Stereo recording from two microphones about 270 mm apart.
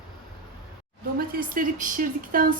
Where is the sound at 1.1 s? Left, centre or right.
Right.